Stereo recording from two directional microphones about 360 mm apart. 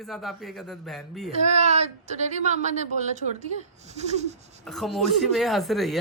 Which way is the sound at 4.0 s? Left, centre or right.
Centre.